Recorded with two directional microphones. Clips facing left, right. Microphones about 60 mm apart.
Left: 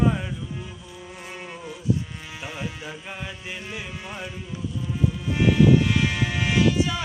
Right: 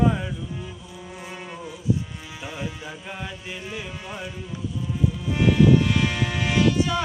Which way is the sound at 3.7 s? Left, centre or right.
Centre.